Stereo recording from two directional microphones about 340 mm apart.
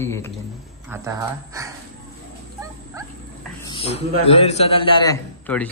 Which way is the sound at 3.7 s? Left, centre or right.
Centre.